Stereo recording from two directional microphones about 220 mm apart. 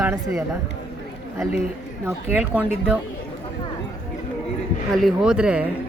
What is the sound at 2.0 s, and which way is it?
Speech, 10° right (ahead or behind).